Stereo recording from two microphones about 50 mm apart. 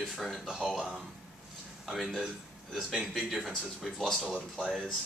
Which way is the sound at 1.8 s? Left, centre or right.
Centre.